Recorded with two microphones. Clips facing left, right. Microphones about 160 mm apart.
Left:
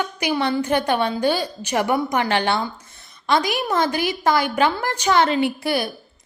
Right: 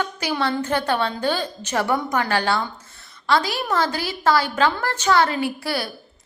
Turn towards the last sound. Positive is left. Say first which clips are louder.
# left 4 dB
turn(degrees=20)  # may be behind; listen again after turning